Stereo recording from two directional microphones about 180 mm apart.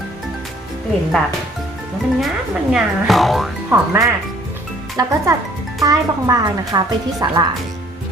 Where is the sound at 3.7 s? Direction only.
15° right (ahead or behind).